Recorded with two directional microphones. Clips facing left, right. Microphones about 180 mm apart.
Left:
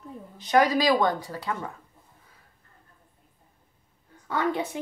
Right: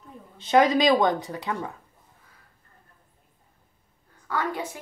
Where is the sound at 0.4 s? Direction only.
25° right (ahead or behind).